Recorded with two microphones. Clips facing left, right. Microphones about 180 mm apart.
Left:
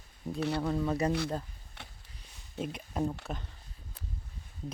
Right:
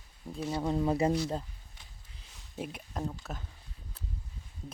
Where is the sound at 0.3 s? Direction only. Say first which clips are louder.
Left 2 dB; 70° left (ahead or behind).